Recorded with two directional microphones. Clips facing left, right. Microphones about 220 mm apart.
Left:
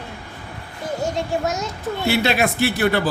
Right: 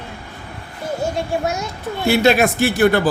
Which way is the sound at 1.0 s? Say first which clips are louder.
Right 1 dB; 10° right (ahead or behind).